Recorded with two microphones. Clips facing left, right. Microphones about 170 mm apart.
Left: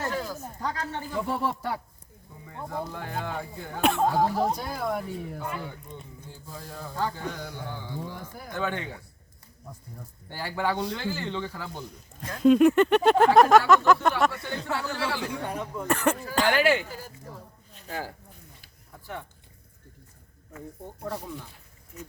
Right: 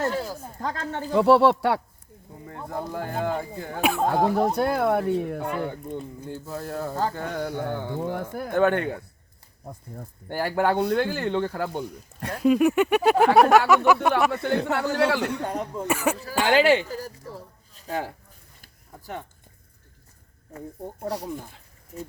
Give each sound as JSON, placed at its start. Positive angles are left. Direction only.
{"t": 0.0, "sound": "a sound", "side_deg": -30}
{"t": 0.6, "sound": "speech", "side_deg": -50}
{"t": 1.0, "sound": "speech", "side_deg": -80}
{"t": 2.5, "sound": "speech", "side_deg": -40}
{"t": 3.8, "sound": "speech", "side_deg": -5}
{"t": 4.0, "sound": "speech", "side_deg": -60}
{"t": 12.4, "sound": "speech", "side_deg": -5}
{"t": 14.4, "sound": "speech", "side_deg": -60}
{"t": 15.9, "sound": "speech", "side_deg": -5}
{"t": 16.6, "sound": "speech", "side_deg": -70}
{"t": 16.9, "sound": "a sound", "side_deg": -35}